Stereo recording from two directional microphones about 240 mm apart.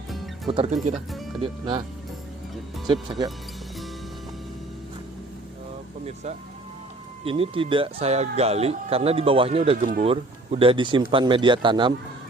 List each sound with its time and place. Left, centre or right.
0.4 s speech: right
0.9 s speech: centre
1.4 s speech: centre
2.8 s speech: centre
7.3 s speech: right